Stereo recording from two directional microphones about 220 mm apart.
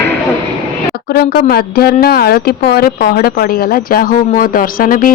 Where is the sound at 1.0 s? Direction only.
45° left (ahead or behind).